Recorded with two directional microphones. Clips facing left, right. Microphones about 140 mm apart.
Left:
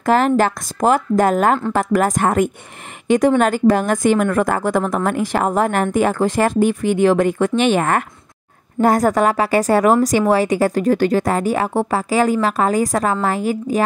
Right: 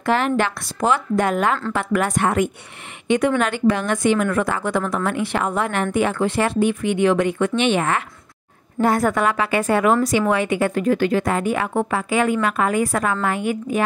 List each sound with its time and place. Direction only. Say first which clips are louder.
0.0 s a woman's voice: left 5 dB; 40° left (ahead or behind)